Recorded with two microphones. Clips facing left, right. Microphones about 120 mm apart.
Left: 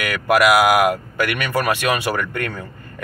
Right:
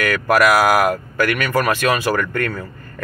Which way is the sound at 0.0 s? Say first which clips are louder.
Right 1 dB; 20° left (ahead or behind).